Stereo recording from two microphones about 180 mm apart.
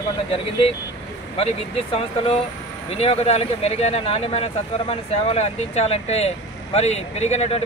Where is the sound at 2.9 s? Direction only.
35° left (ahead or behind).